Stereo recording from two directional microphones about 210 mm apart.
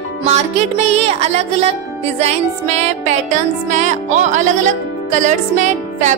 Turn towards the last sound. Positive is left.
turn(degrees=-35)  # may be behind; listen again after turning